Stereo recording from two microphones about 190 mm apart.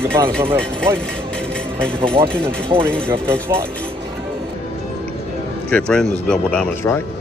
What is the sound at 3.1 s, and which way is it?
Speech, 10° right (ahead or behind).